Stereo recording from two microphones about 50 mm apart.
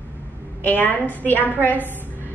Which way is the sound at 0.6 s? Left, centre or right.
Left.